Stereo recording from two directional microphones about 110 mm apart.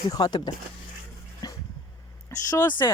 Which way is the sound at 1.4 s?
40° left (ahead or behind).